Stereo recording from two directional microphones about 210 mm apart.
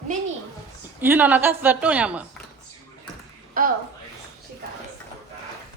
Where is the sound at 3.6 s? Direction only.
40° right (ahead or behind).